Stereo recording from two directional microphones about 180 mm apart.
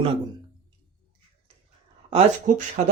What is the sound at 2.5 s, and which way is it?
Speech, 45° right (ahead or behind).